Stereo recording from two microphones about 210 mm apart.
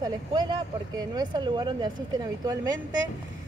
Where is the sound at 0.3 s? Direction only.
20° right (ahead or behind).